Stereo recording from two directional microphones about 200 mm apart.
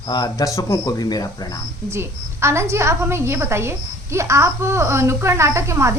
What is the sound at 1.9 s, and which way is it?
Speech, 15° right (ahead or behind).